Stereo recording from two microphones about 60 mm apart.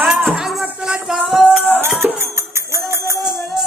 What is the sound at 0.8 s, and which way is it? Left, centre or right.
Music, centre.